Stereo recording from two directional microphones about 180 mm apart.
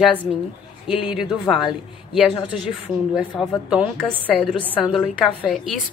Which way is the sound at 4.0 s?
5° left (ahead or behind).